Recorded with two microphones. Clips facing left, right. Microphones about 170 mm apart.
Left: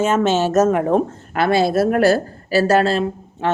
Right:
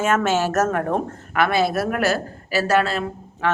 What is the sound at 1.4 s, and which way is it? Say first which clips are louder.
Speech: left 4 dB; 30° left (ahead or behind).